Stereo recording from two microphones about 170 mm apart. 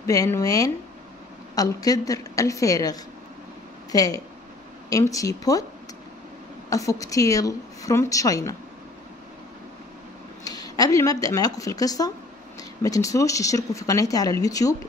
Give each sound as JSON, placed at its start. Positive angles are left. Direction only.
{"t": 0.0, "sound": "speech", "side_deg": 20}
{"t": 6.7, "sound": "speech", "side_deg": 20}
{"t": 10.4, "sound": "speech", "side_deg": 20}